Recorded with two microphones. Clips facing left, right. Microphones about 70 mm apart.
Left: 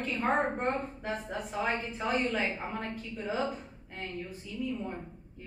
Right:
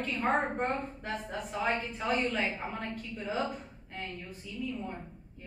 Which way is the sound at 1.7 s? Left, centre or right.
Centre.